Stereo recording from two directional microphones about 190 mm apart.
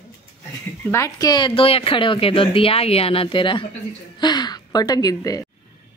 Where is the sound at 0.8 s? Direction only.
15° left (ahead or behind).